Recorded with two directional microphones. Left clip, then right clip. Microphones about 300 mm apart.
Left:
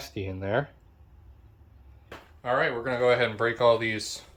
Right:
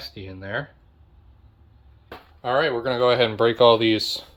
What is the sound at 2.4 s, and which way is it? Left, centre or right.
Speech, right.